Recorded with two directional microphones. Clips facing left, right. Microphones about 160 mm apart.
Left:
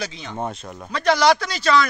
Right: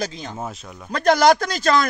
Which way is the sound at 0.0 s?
40° right (ahead or behind).